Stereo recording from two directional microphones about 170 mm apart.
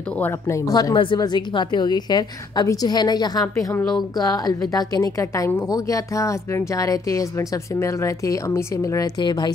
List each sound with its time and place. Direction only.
0.2 s a woman's voice: 15° left (ahead or behind)